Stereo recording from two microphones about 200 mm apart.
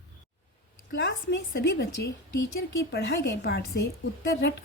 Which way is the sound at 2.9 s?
55° left (ahead or behind).